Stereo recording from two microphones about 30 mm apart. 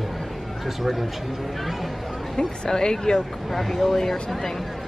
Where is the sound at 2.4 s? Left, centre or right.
Left.